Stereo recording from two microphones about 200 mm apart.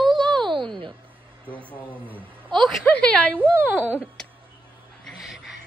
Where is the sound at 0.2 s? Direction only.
5° left (ahead or behind).